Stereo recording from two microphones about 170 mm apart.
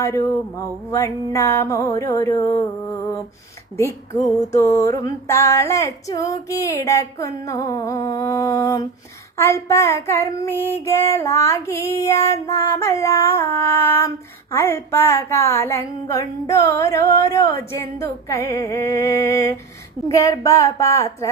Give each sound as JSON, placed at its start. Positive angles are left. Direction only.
{"t": 0.0, "sound": "female singing", "side_deg": 20}
{"t": 3.8, "sound": "female singing", "side_deg": 15}